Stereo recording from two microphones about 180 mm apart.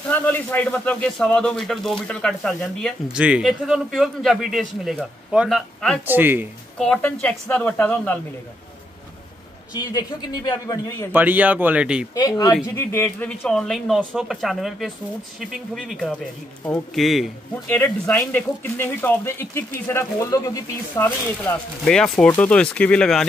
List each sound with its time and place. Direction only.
0.1 s a man's voice: 10° left (ahead or behind)
6.0 s speech: 10° right (ahead or behind)
6.8 s speech: 5° left (ahead or behind)
9.8 s a man's voice: 20° left (ahead or behind)
11.1 s speech: 10° right (ahead or behind)
12.2 s a man's voice: 20° left (ahead or behind); by 17.3 s centre (ahead or behind)
17.6 s speech: 10° left (ahead or behind)
21.0 s a man's voice: 5° left (ahead or behind)